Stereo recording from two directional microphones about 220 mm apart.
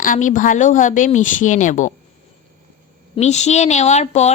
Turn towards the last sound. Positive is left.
turn(degrees=30)  # may be behind; listen again after turning